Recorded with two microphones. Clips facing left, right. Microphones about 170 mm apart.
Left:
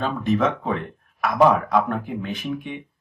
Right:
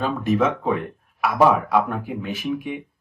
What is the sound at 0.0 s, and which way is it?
Speech, 5° right (ahead or behind).